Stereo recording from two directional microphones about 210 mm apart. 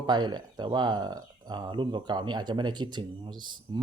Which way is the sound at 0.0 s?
20° right (ahead or behind).